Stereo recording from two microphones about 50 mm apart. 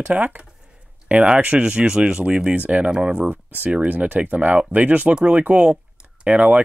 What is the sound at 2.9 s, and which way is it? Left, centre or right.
Speech, centre.